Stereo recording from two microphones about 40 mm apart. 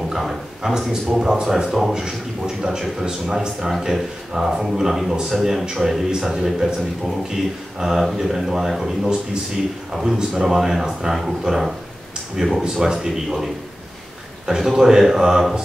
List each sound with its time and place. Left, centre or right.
0.1 s speech: centre
7.8 s a man's voice: centre